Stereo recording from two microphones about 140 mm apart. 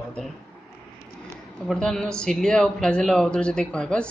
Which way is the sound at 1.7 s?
5° left (ahead or behind).